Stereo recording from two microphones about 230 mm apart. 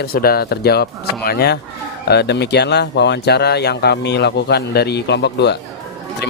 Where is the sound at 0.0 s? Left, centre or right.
Left.